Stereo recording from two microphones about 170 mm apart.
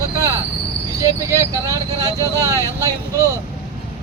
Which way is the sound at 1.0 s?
20° right (ahead or behind).